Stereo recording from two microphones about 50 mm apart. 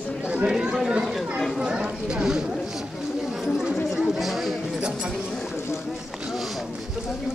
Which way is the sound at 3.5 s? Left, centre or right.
Centre.